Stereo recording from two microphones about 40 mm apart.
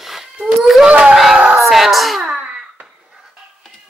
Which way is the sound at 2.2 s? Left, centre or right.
Right.